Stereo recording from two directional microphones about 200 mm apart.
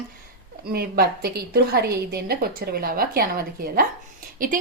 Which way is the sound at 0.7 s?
50° right (ahead or behind).